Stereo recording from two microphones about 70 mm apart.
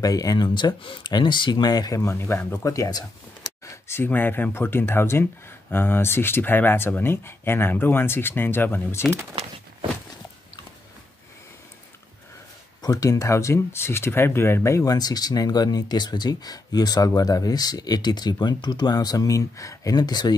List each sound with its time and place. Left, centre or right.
0.0 s speech: left
2.0 s speech: left
2.6 s speech: left
3.6 s speech: left
12.8 s speech: left
14.8 s speech: left